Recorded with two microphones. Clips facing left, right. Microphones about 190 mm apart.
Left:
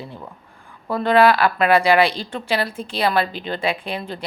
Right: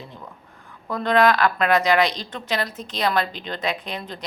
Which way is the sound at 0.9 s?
10° left (ahead or behind).